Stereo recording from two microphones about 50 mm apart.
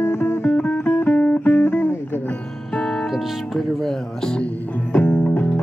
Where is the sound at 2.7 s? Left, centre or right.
Centre.